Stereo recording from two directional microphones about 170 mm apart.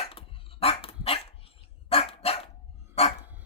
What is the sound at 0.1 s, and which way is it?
Dog, 35° left (ahead or behind).